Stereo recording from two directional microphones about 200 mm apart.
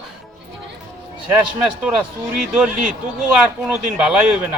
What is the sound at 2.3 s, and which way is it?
A man's voice, 5° right (ahead or behind).